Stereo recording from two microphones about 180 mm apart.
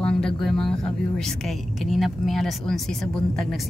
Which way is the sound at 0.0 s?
5° left (ahead or behind).